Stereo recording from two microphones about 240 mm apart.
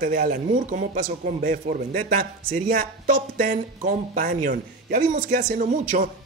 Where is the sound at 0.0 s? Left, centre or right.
Right.